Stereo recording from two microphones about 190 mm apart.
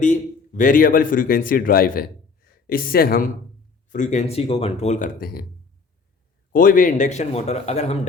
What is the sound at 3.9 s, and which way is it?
A man's voice, 40° left (ahead or behind).